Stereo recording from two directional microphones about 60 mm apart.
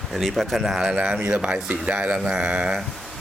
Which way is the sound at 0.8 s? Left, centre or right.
Centre.